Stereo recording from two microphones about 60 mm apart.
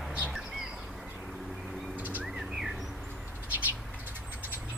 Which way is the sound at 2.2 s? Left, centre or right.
Centre.